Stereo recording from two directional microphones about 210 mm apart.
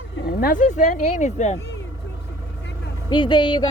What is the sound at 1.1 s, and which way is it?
Speech, 35° left (ahead or behind).